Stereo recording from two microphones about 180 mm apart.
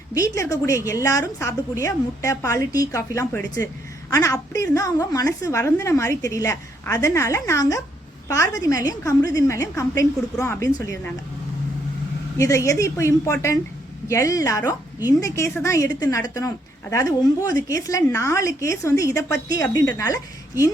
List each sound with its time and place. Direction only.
0.1 s a woman's voice: 20° left (ahead or behind)
12.4 s a woman's voice: 15° left (ahead or behind)